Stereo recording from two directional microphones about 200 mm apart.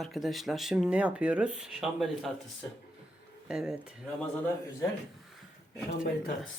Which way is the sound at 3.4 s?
5° right (ahead or behind).